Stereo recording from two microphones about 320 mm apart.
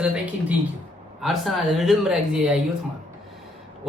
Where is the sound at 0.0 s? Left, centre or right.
Centre.